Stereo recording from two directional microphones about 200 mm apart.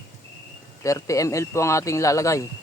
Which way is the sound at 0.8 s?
15° left (ahead or behind).